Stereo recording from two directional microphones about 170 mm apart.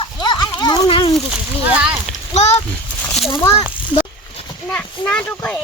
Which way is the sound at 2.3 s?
40° left (ahead or behind).